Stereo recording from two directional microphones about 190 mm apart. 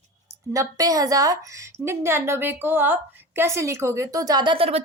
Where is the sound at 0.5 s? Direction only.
20° right (ahead or behind).